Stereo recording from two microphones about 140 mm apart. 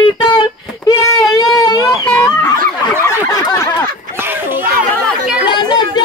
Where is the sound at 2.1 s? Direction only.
25° left (ahead or behind).